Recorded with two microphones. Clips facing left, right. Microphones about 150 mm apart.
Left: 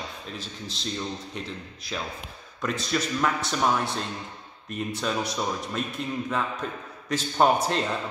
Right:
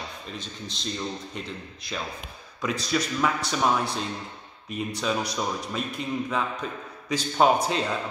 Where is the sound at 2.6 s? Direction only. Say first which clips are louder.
Right 1 dB; centre (ahead or behind).